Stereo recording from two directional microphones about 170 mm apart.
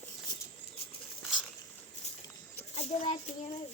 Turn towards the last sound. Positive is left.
turn(degrees=40)  # may be behind; listen again after turning